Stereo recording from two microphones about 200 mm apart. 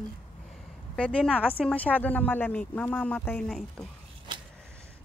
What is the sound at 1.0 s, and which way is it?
Speech, 5° left (ahead or behind).